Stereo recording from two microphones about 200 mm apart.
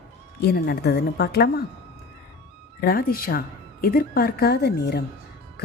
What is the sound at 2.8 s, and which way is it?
A woman's voice, 50° left (ahead or behind).